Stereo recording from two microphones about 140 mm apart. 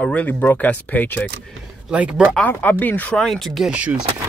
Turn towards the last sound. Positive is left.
turn(degrees=-10)  # may be behind; listen again after turning